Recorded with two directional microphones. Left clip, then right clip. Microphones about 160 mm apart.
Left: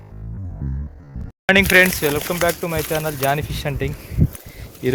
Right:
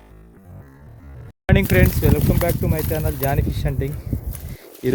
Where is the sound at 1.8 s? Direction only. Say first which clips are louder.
Left 5 dB; 10° right (ahead or behind).